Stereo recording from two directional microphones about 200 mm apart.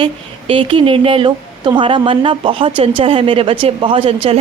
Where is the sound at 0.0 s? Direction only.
25° right (ahead or behind).